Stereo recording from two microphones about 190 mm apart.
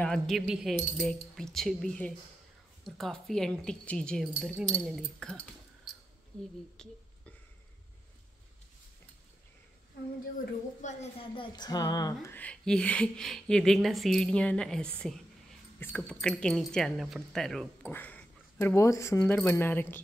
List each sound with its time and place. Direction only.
0.0 s a woman's voice: centre (ahead or behind)
10.8 s a sound: 35° left (ahead or behind); by 12.4 s 20° left (ahead or behind)
12.4 s a woman's voice: 5° left (ahead or behind)